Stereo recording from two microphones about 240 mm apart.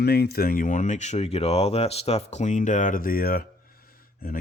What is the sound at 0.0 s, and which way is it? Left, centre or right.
Speech, left.